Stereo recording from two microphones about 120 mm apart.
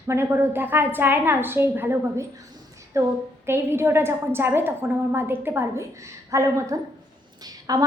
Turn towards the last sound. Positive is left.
turn(degrees=-30)  # may be behind; listen again after turning